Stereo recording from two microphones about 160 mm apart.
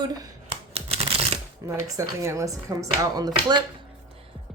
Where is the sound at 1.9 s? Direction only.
20° right (ahead or behind).